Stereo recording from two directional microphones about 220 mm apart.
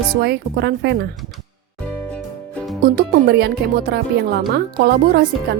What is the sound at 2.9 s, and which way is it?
A woman's voice, 45° right (ahead or behind).